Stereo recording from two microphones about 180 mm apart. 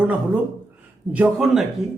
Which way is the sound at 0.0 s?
10° right (ahead or behind).